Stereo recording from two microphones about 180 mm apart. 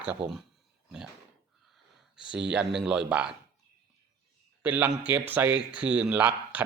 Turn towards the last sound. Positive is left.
turn(degrees=-10)  # may be behind; listen again after turning